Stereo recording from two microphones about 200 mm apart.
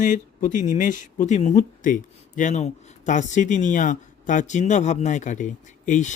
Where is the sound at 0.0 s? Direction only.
40° left (ahead or behind).